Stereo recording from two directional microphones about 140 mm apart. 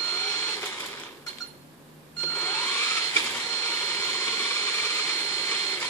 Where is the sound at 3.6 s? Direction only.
20° left (ahead or behind).